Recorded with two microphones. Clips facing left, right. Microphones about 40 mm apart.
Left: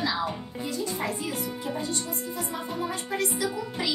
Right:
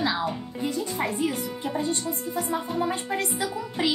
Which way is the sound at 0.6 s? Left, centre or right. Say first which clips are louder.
Right 3 dB; right.